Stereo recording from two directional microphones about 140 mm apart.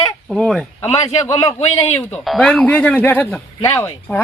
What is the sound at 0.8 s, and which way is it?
Speech, 50° left (ahead or behind).